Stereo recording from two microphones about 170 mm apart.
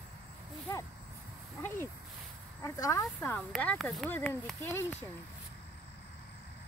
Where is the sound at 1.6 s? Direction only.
15° left (ahead or behind).